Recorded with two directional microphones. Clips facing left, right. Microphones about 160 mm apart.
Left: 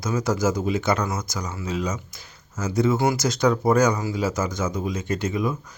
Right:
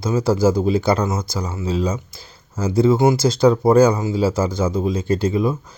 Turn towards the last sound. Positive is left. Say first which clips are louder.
# right 6 dB
turn(degrees=-30)  # may be behind; listen again after turning